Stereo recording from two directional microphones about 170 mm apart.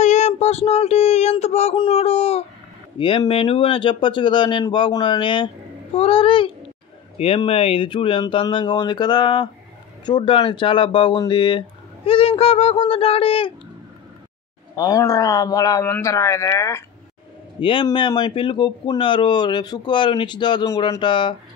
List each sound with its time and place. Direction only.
0.0 s a sound: 45° left (ahead or behind)
1.9 s speech: 35° left (ahead or behind)
14.8 s speech: 20° left (ahead or behind)
17.6 s speech: 30° left (ahead or behind)